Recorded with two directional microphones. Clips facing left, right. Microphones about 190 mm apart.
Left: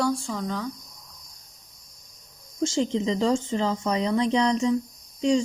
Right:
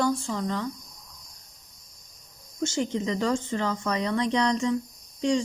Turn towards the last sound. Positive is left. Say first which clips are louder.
# left 3 dB
turn(degrees=25)  # may be behind; listen again after turning